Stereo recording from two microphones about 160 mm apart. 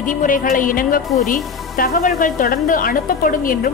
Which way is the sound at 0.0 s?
55° left (ahead or behind).